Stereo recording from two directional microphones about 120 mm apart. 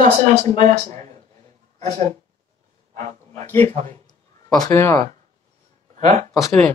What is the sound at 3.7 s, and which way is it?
Speech, 65° right (ahead or behind).